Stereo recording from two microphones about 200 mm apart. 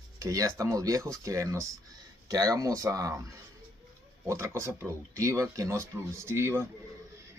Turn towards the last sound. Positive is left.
turn(degrees=-10)  # may be behind; listen again after turning